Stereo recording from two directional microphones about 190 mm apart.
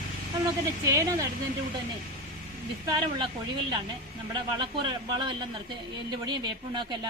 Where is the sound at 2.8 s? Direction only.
25° right (ahead or behind).